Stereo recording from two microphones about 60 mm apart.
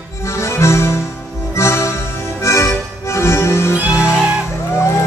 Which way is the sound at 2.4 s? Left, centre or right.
Left.